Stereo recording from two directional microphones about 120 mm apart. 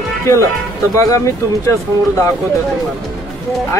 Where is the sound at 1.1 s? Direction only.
25° left (ahead or behind).